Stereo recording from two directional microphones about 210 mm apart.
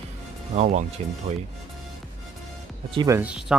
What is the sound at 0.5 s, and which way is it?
Speech, 35° right (ahead or behind).